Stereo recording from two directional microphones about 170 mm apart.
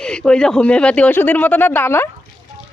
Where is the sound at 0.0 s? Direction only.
5° left (ahead or behind).